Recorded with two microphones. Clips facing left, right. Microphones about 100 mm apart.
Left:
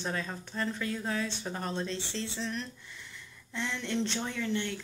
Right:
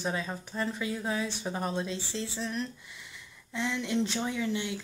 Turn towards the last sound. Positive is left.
turn(degrees=-10)  # may be behind; listen again after turning